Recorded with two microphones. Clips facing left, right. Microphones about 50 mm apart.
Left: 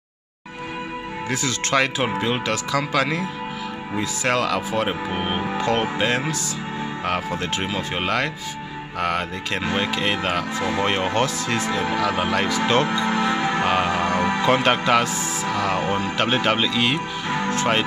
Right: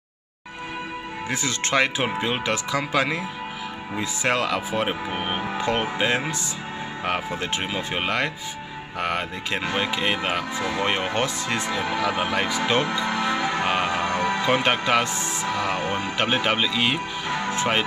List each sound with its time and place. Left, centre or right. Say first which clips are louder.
1.3 s speech: left 2 dB; centre
4.8 s speech: left 2 dB; centre
13.4 s music: left 2 dB; left
13.7 s speech: left 3 dB; centre
14.0 s music: left 2 dB; left
14.4 s speech: left 4 dB; centre